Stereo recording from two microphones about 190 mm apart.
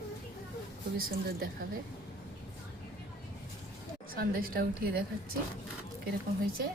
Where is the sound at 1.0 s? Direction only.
50° right (ahead or behind).